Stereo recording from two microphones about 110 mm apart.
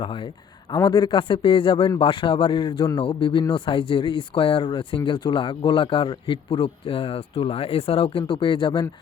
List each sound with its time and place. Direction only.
0.0 s speech: 50° left (ahead or behind)